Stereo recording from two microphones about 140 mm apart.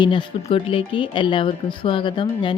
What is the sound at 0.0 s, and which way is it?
Speech, 35° left (ahead or behind).